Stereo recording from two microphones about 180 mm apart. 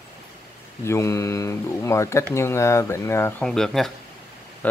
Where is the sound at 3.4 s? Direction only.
Centre (ahead or behind).